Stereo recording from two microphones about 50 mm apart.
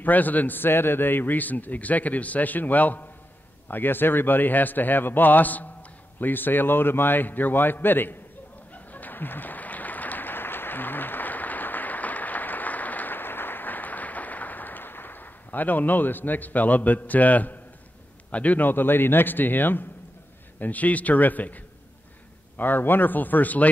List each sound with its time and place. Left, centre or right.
0.0 s a man's voice: left
8.7 s applause: left
18.3 s a man's voice: left
22.6 s a man's voice: left